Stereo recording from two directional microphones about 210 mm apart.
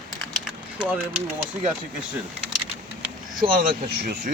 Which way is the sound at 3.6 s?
45° right (ahead or behind).